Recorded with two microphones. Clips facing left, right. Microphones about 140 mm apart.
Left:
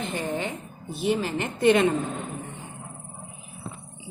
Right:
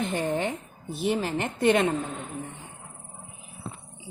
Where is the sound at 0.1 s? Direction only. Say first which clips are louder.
Right 2 dB; 55° right (ahead or behind).